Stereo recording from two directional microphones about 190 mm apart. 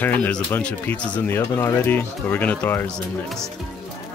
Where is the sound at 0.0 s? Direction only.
10° left (ahead or behind).